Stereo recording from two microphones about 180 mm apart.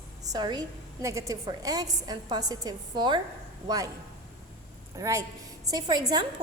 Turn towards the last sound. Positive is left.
turn(degrees=-25)  # may be behind; listen again after turning